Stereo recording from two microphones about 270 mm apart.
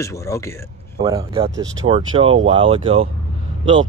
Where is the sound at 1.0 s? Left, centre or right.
Centre.